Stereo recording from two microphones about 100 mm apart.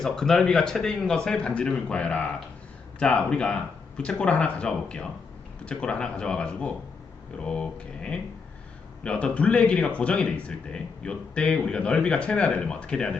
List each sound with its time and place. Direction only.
0.0 s speech: 5° left (ahead or behind)